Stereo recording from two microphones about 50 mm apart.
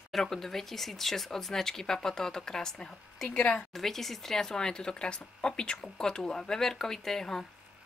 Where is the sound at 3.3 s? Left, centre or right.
Left.